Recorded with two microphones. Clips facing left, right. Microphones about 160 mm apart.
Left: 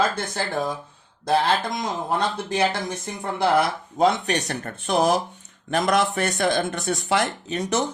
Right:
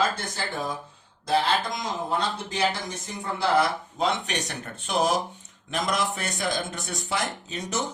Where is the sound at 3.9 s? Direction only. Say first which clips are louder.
Left 8 dB; 50° left (ahead or behind).